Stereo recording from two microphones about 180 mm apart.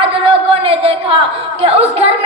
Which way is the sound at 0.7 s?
35° right (ahead or behind).